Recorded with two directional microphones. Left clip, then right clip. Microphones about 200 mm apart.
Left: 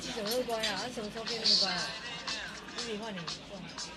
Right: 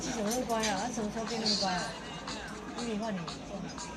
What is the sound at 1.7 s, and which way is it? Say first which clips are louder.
Music: even; 10° left (ahead or behind).